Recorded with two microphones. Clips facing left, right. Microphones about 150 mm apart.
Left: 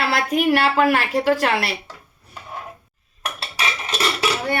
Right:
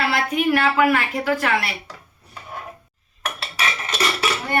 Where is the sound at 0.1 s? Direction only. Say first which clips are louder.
Left 1 dB; 35° left (ahead or behind).